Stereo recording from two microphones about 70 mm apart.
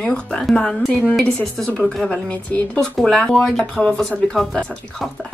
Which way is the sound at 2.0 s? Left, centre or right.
Left.